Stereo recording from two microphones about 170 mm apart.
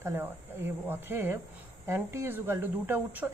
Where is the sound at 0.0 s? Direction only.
15° right (ahead or behind).